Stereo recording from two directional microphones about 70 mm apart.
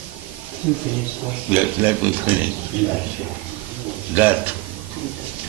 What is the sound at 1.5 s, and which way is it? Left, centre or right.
A man's voice, right.